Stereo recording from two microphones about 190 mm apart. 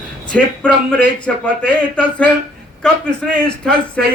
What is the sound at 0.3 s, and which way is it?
A man's voice, 5° left (ahead or behind).